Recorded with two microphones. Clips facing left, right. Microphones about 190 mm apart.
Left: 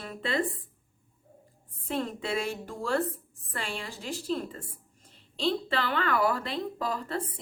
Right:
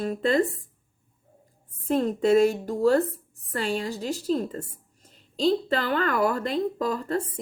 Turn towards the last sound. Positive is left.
turn(degrees=-45)  # may be behind; listen again after turning